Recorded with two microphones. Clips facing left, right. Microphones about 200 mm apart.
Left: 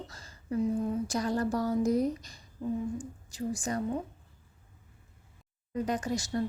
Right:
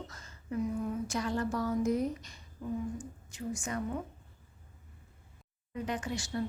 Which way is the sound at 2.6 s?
25° left (ahead or behind).